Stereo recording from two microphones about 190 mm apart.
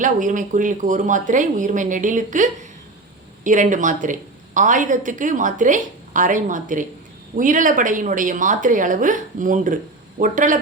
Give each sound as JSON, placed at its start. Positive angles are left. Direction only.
{"t": 0.0, "sound": "a woman's voice", "side_deg": -40}